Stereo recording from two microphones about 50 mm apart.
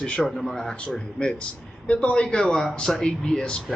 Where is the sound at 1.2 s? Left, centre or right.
Left.